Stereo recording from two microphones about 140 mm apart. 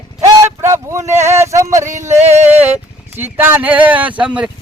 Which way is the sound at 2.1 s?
55° right (ahead or behind).